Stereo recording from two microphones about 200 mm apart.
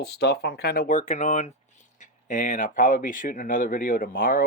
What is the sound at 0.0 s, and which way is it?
Speech, 55° left (ahead or behind).